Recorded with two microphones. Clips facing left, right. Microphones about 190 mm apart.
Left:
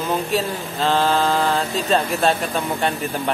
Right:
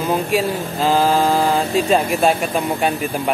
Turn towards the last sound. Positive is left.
turn(degrees=-10)  # may be behind; listen again after turning